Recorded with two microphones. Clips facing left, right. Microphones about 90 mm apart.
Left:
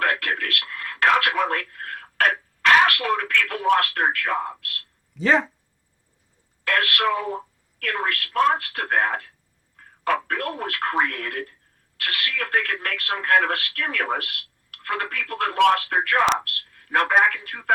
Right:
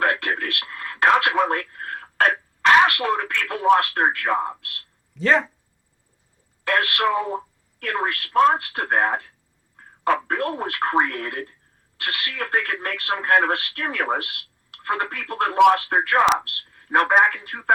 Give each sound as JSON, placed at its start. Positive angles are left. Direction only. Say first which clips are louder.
{"t": 0.0, "sound": "radio", "louder": "right 2 dB", "side_deg": -25}
{"t": 2.8, "sound": "speech", "louder": "right 1 dB", "side_deg": -25}
{"t": 5.1, "sound": "speech", "louder": "right 1 dB", "side_deg": 0}
{"t": 6.7, "sound": "speech", "louder": "right 1 dB", "side_deg": -25}